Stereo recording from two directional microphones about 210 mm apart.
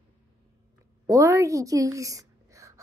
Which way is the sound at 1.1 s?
15° right (ahead or behind).